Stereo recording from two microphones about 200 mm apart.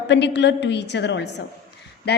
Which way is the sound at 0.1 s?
60° left (ahead or behind).